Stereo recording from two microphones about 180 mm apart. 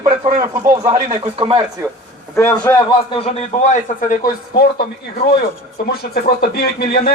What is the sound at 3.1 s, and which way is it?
A man's voice, 35° left (ahead or behind).